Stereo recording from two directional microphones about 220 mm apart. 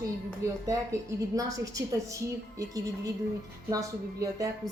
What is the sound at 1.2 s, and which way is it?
A woman's voice, 15° right (ahead or behind).